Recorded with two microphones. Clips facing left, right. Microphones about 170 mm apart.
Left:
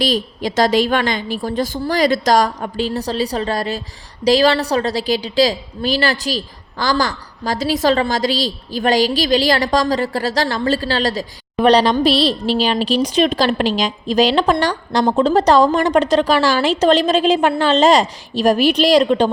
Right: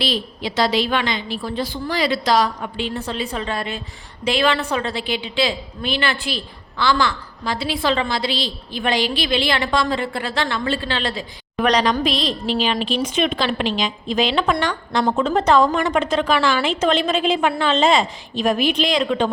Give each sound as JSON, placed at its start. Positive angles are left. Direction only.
{"t": 0.0, "sound": "a woman's voice", "side_deg": 45}